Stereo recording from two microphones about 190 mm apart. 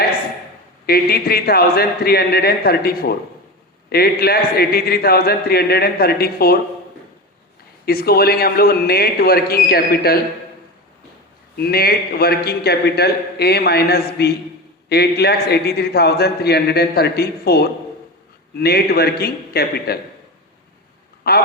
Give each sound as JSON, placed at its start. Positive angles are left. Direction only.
{"t": 0.9, "sound": "a man's voice", "side_deg": 55}
{"t": 7.9, "sound": "a man's voice", "side_deg": 55}
{"t": 11.5, "sound": "a man's voice", "side_deg": 55}
{"t": 21.2, "sound": "a man's voice", "side_deg": 55}